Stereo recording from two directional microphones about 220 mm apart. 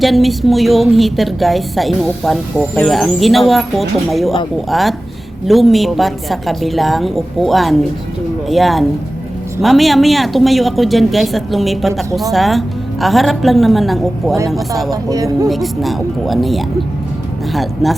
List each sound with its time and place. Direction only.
0.0 s speech: centre (ahead or behind)
15.1 s speech: 15° right (ahead or behind)
15.4 s speech: centre (ahead or behind)